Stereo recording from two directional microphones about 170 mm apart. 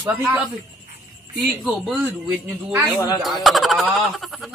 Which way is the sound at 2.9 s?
25° left (ahead or behind).